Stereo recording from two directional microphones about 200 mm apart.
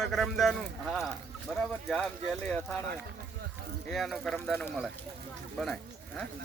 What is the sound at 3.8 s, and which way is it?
Speech, centre (ahead or behind).